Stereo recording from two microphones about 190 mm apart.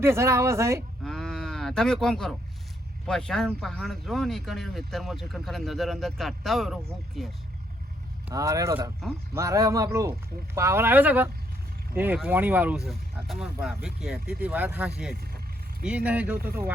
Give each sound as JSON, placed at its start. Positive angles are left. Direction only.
{"t": 0.0, "sound": "speech", "side_deg": -15}
{"t": 1.0, "sound": "cattle", "side_deg": 5}
{"t": 3.1, "sound": "speech", "side_deg": 5}
{"t": 8.3, "sound": "speech", "side_deg": -20}
{"t": 16.4, "sound": "speech", "side_deg": -50}